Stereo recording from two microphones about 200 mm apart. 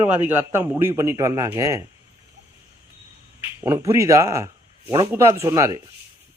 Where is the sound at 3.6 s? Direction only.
15° right (ahead or behind).